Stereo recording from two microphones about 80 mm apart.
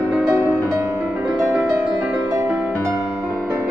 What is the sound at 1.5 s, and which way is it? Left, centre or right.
Music, centre.